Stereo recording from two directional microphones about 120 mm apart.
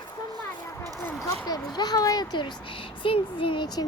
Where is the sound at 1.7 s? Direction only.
35° left (ahead or behind).